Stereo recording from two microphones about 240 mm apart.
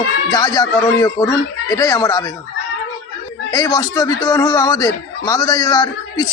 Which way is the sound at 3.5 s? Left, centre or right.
Centre.